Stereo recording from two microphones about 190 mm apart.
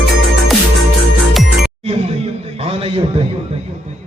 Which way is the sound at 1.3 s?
Centre (ahead or behind).